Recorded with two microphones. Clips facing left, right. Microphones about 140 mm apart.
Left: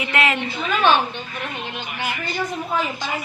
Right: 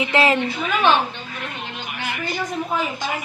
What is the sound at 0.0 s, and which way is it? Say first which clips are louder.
Speech: right 4 dB; 30° right (ahead or behind).